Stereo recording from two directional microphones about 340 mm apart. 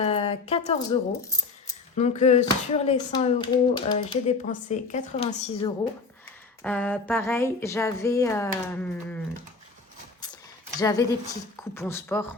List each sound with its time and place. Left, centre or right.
0.0 s speech: centre
2.0 s speech: centre
6.6 s speech: centre
10.8 s a woman's voice: centre